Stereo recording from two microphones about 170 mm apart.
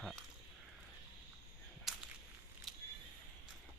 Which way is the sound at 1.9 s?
Centre (ahead or behind).